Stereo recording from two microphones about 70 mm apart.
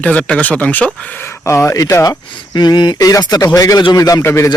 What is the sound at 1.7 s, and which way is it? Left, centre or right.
Speech, left.